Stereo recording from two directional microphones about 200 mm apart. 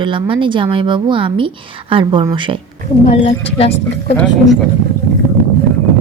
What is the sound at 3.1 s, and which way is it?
Speech, 30° left (ahead or behind).